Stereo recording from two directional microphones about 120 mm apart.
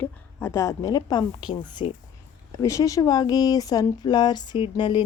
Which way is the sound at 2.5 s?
25° left (ahead or behind).